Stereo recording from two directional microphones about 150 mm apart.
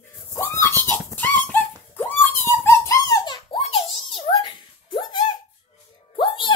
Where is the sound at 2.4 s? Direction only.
15° left (ahead or behind); by 5.0 s 35° left (ahead or behind).